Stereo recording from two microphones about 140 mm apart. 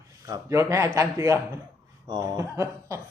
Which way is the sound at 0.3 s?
20° right (ahead or behind).